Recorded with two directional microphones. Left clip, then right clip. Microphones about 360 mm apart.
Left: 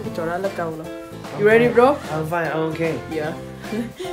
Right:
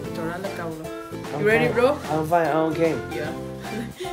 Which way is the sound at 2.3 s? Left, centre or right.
Right.